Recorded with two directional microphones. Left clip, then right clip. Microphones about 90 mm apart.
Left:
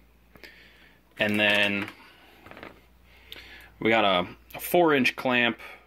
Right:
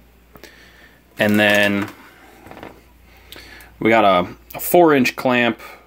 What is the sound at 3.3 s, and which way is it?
Speech, 15° right (ahead or behind).